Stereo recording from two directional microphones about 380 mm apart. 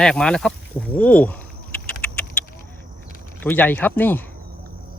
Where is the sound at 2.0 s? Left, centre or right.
Centre.